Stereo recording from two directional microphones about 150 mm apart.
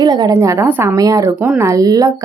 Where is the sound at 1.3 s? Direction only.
10° right (ahead or behind).